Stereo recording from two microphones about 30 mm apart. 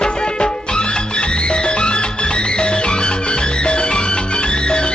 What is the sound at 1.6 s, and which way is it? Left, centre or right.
Music, left.